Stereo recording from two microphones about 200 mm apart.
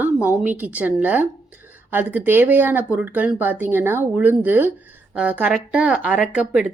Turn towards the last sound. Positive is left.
turn(degrees=-5)  # may be behind; listen again after turning